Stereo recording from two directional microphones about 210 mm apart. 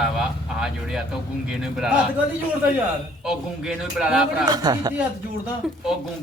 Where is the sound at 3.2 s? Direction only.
Centre (ahead or behind).